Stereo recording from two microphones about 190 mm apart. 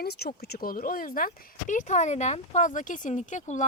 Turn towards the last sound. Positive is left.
turn(degrees=40)  # may be behind; listen again after turning